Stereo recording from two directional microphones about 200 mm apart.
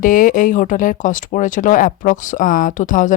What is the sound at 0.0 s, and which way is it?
Speech, 45° left (ahead or behind).